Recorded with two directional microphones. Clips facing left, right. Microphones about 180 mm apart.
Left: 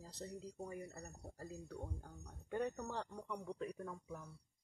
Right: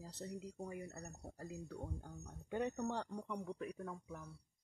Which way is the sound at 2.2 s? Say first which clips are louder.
Even; 20° right (ahead or behind).